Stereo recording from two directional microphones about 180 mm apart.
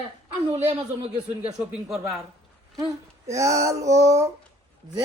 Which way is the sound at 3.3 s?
15° right (ahead or behind).